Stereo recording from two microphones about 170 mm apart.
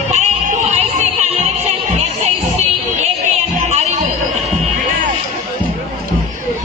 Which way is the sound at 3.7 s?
45° right (ahead or behind).